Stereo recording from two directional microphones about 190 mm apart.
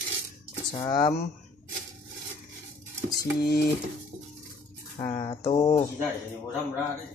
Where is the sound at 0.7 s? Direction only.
20° left (ahead or behind).